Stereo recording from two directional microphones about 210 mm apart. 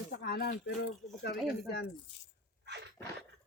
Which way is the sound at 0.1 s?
50° left (ahead or behind).